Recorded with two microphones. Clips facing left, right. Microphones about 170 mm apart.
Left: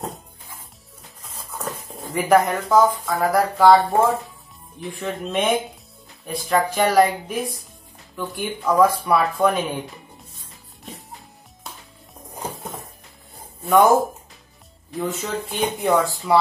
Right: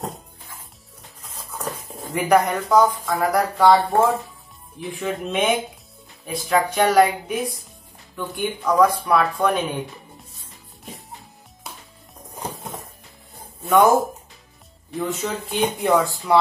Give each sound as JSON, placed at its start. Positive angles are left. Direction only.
{"t": 1.2, "sound": "speech", "side_deg": 0}
{"t": 12.5, "sound": "music", "side_deg": 0}
{"t": 13.7, "sound": "speech", "side_deg": 0}